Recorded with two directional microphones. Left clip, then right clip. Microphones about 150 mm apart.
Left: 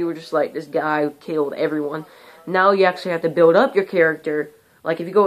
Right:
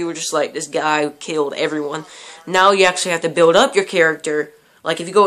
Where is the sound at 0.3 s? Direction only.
15° right (ahead or behind).